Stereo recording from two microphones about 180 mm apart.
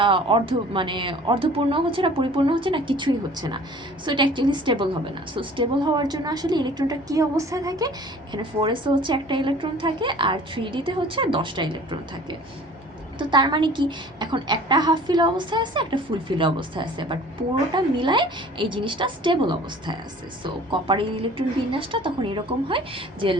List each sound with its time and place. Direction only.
0.0 s a woman's voice: 30° right (ahead or behind)